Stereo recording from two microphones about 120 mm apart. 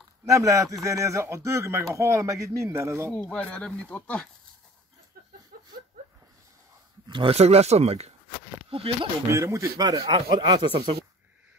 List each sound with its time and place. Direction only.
0.2 s speech: 25° right (ahead or behind)
3.2 s speech: 10° left (ahead or behind)
7.1 s speech: 45° right (ahead or behind)
7.3 s speech: 60° right (ahead or behind)
8.6 s speech: 50° right (ahead or behind)
9.3 s speech: 25° right (ahead or behind); by 10.9 s 40° right (ahead or behind)